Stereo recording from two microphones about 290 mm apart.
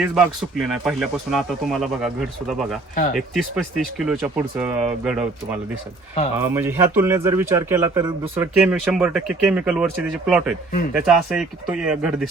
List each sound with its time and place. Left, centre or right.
0.0 s a man's voice: centre
2.9 s speech: left
3.2 s a man's voice: centre